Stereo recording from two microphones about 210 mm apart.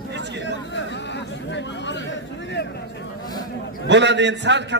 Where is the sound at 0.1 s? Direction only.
55° right (ahead or behind).